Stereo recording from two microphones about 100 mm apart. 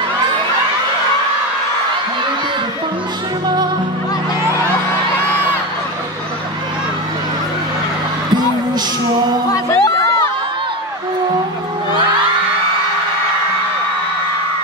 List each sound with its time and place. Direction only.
9.5 s music: 30° left (ahead or behind)